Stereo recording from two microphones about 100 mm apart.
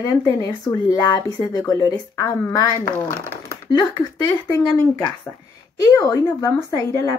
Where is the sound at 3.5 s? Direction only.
45° left (ahead or behind).